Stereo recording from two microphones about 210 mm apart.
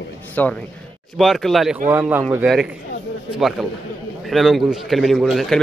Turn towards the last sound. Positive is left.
turn(degrees=0)  # may be behind; listen again after turning